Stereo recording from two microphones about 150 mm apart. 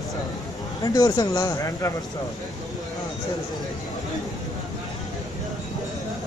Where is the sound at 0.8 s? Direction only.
25° left (ahead or behind).